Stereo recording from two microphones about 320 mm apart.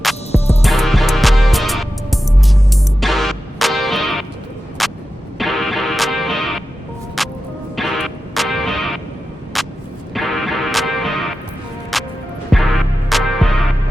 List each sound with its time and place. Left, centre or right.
0.3 s music: centre
0.6 s music: centre
4.8 s vehicle: centre
5.4 s music: centre